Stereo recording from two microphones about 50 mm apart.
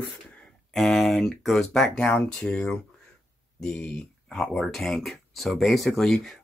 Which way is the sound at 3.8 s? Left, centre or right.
Left.